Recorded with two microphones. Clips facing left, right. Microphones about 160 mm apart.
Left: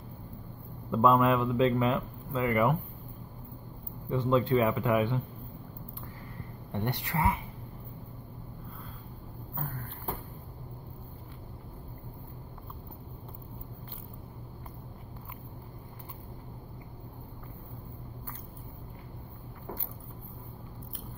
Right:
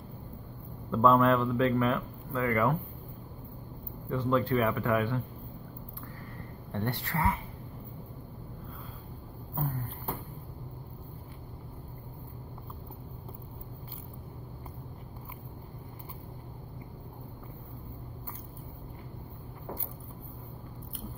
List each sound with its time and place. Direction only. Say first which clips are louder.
0.9 s speech: right 1 dB; 15° left (ahead or behind)
4.1 s a man's voice: left 2 dB; 20° left (ahead or behind)
6.7 s speech: even; 15° left (ahead or behind)